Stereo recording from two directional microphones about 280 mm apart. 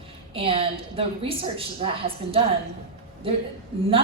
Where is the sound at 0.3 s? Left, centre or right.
Centre.